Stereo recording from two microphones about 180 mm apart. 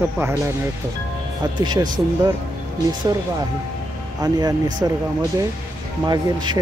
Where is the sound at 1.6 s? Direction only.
25° right (ahead or behind).